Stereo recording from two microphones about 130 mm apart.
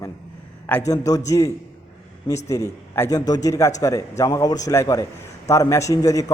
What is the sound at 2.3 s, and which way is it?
Speech, 35° left (ahead or behind).